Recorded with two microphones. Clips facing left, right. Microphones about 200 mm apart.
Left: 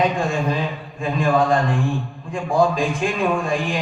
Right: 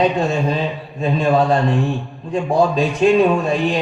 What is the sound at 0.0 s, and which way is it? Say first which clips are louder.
A man's voice: right 3 dB; 35° right (ahead or behind).